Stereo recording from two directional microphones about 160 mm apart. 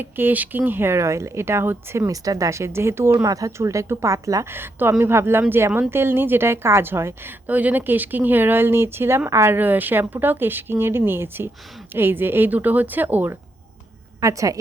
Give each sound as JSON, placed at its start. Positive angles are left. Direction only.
{"t": 0.0, "sound": "a woman's voice", "side_deg": -10}